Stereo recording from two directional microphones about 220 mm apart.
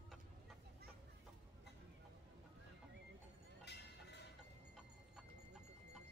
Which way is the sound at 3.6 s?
50° left (ahead or behind).